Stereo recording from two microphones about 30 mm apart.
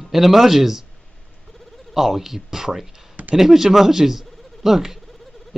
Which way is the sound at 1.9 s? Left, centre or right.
Centre.